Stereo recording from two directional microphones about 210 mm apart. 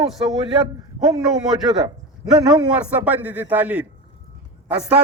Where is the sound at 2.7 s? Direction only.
5° right (ahead or behind).